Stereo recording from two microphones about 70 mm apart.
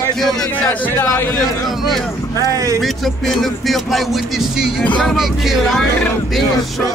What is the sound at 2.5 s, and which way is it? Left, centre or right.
Speech, right.